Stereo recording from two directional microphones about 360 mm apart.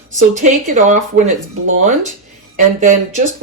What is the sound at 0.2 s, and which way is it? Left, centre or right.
Speech, right.